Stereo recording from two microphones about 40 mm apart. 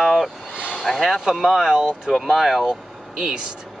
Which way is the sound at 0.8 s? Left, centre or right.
Centre.